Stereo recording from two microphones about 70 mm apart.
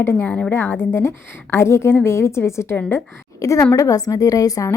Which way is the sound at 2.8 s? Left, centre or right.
Left.